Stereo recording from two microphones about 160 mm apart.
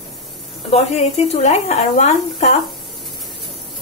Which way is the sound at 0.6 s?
40° left (ahead or behind).